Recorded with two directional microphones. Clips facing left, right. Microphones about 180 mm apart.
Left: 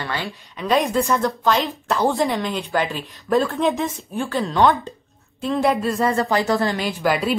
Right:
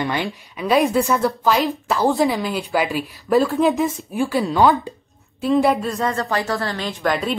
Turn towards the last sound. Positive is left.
turn(degrees=5)  # may be behind; listen again after turning